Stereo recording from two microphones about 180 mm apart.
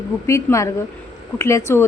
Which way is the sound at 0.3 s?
15° left (ahead or behind).